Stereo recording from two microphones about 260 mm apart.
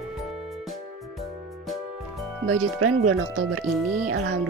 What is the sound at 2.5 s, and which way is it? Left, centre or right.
Speech, right.